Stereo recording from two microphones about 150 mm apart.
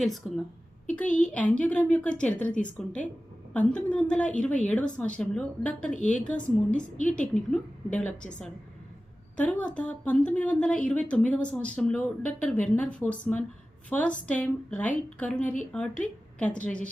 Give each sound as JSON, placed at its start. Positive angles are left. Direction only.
{"t": 0.0, "sound": "a woman's voice", "side_deg": 0}